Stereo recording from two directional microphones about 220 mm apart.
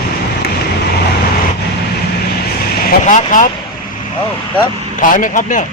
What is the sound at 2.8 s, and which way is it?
Speech, 35° left (ahead or behind).